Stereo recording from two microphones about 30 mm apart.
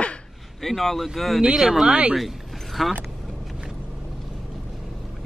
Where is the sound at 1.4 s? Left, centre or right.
Centre.